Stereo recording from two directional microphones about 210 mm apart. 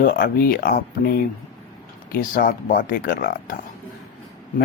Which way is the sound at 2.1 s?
40° left (ahead or behind).